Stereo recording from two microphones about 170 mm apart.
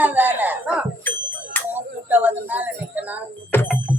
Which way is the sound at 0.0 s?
10° right (ahead or behind).